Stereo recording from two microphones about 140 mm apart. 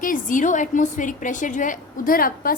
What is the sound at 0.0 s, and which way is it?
A woman's voice, 70° left (ahead or behind).